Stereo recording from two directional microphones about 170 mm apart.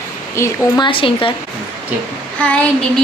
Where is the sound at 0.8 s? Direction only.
30° left (ahead or behind).